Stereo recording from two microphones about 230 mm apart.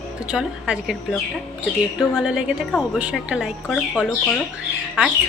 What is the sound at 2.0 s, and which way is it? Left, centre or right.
A woman's voice, centre.